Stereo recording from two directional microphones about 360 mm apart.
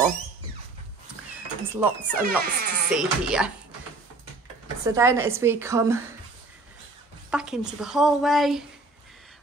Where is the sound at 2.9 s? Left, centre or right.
Centre.